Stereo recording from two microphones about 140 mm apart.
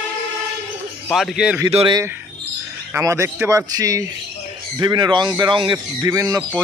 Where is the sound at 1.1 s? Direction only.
Centre (ahead or behind).